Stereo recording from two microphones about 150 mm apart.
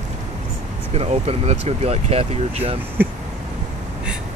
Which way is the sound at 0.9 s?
45° right (ahead or behind).